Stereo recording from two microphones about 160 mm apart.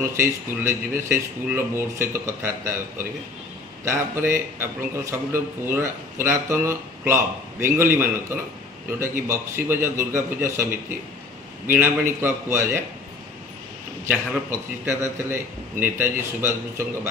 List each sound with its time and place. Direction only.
0.0 s a man's voice: 15° right (ahead or behind)
14.0 s a man's voice: 15° right (ahead or behind)